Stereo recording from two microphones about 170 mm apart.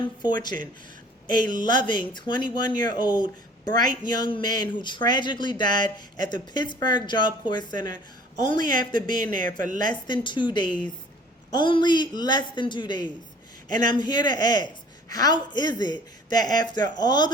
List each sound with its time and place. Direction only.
0.2 s speech: 25° left (ahead or behind)
9.6 s a woman's voice: 50° right (ahead or behind)
9.8 s speech: 25° left (ahead or behind)